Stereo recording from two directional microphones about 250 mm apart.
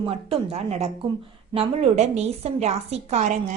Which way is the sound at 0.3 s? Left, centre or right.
Right.